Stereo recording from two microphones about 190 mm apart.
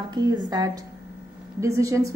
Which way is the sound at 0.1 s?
20° right (ahead or behind).